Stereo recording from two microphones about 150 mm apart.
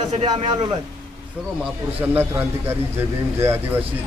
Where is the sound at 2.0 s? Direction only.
15° right (ahead or behind).